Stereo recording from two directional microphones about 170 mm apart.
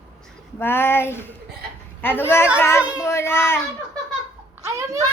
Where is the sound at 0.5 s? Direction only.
15° left (ahead or behind).